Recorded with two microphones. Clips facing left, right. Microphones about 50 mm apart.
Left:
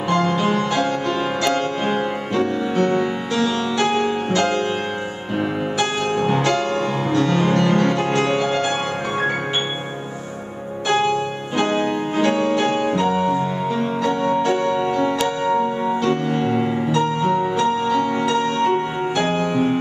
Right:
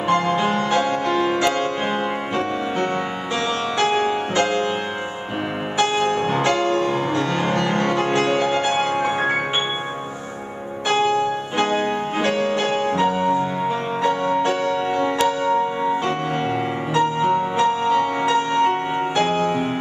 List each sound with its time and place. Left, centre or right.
0.1 s music: centre
2.3 s music: centre
5.8 s music: centre
10.9 s music: centre
12.9 s music: centre
14.8 s music: centre
16.0 s music: right
19.1 s music: centre